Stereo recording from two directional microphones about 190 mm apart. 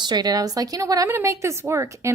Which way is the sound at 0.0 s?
20° right (ahead or behind).